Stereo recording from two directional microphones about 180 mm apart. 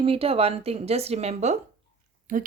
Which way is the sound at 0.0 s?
30° right (ahead or behind).